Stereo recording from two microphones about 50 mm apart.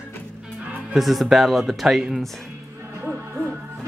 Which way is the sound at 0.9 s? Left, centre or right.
Centre.